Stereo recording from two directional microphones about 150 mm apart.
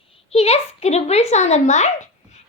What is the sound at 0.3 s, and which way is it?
A woman's voice, 45° left (ahead or behind).